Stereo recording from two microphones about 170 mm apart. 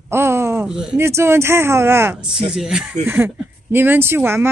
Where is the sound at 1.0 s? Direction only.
15° right (ahead or behind).